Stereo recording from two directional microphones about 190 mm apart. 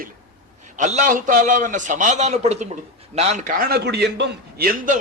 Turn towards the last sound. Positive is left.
turn(degrees=-50)  # may be behind; listen again after turning